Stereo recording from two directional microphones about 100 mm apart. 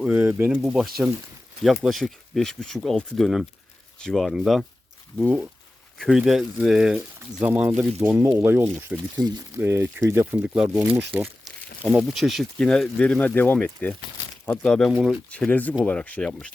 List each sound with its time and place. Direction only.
0.0 s speech: 10° right (ahead or behind)
0.6 s speech: centre (ahead or behind)
6.1 s speech: 5° right (ahead or behind); by 10.2 s 25° right (ahead or behind)
10.3 s speech: 10° right (ahead or behind)
11.9 s speech: centre (ahead or behind)